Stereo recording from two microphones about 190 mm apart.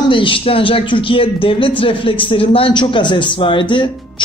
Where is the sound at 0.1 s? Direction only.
25° left (ahead or behind).